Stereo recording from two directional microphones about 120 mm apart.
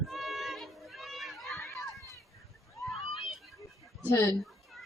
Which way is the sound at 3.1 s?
45° left (ahead or behind).